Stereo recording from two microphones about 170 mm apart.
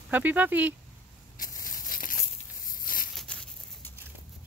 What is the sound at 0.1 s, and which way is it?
Speech, 10° right (ahead or behind).